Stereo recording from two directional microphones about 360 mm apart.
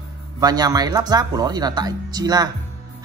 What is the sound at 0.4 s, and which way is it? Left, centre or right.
Speech, centre.